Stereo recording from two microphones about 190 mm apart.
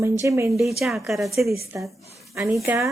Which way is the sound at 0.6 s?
Centre (ahead or behind).